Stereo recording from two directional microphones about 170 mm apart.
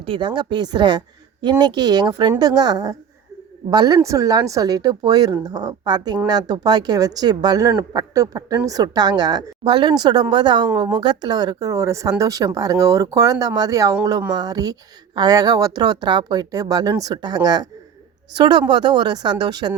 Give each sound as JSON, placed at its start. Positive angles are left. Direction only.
{"t": 0.0, "sound": "speech", "side_deg": -30}